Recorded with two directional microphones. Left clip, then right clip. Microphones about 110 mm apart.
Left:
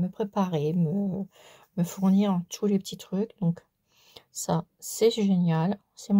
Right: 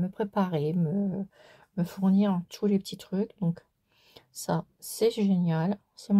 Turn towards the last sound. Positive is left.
turn(degrees=15)  # may be behind; listen again after turning